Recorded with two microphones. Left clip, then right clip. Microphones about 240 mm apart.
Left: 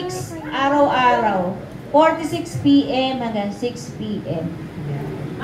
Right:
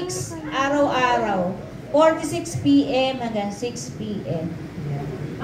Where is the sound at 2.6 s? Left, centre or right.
Right.